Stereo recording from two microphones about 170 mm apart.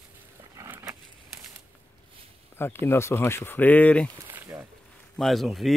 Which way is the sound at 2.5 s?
15° left (ahead or behind).